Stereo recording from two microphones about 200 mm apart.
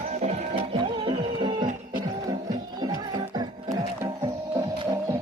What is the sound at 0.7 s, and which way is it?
Music, 25° right (ahead or behind).